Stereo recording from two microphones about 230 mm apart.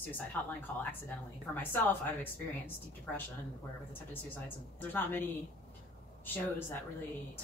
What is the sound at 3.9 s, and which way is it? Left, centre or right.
A woman's voice, centre.